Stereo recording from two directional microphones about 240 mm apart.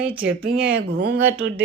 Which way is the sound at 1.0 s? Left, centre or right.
Right.